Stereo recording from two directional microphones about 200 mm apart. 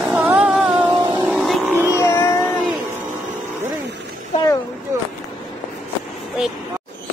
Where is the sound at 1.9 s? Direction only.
15° left (ahead or behind).